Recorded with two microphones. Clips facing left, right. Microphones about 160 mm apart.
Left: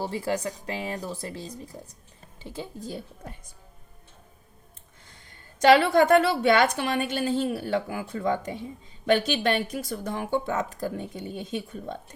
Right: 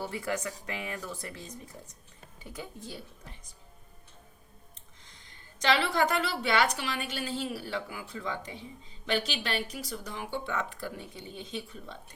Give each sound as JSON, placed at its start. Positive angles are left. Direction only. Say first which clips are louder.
{"t": 0.0, "sound": "speech", "louder": "left 5 dB", "side_deg": 30}
{"t": 2.8, "sound": "a woman's voice", "louder": "left 7 dB", "side_deg": 45}
{"t": 5.3, "sound": "a woman's voice", "louder": "left 10 dB", "side_deg": 50}